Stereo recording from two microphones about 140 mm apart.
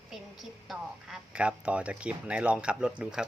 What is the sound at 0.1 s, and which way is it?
A woman's voice, centre (ahead or behind).